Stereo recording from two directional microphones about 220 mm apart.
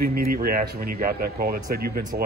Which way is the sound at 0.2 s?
40° right (ahead or behind).